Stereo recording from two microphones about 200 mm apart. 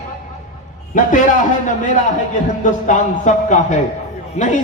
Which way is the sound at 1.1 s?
40° left (ahead or behind).